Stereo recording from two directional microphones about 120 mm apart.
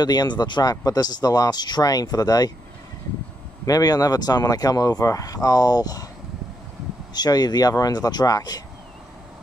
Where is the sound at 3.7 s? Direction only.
30° left (ahead or behind).